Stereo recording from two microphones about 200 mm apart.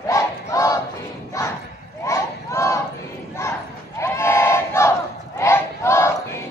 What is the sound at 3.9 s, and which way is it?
Battle cry, 15° left (ahead or behind).